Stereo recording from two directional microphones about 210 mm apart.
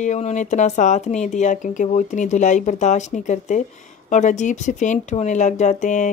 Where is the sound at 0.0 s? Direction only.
35° left (ahead or behind).